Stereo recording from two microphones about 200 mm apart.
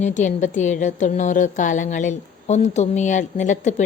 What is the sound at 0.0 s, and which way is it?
A woman's voice, 40° left (ahead or behind).